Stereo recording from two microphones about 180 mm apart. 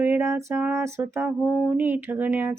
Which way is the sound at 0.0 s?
15° right (ahead or behind).